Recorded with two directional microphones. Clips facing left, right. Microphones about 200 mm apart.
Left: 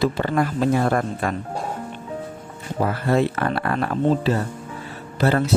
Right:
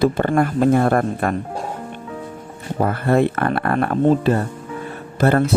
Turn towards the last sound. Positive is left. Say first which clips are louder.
# right 4 dB
turn(degrees=-50)  # may be behind; listen again after turning